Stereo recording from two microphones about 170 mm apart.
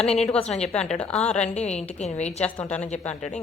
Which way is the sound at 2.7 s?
40° left (ahead or behind).